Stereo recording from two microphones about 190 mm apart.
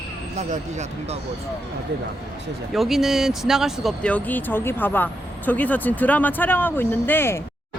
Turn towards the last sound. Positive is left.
turn(degrees=10)  # may be behind; listen again after turning